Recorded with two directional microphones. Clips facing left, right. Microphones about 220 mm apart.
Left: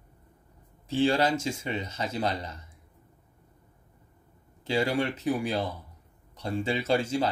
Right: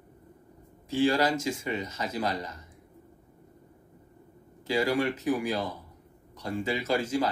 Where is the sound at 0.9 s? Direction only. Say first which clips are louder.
Even; 30° left (ahead or behind).